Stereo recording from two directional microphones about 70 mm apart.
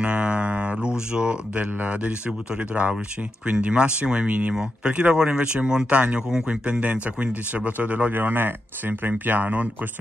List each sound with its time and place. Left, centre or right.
0.0 s speech: centre